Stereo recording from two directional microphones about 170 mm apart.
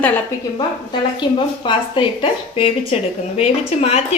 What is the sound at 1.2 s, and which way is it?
A woman's voice, 30° left (ahead or behind).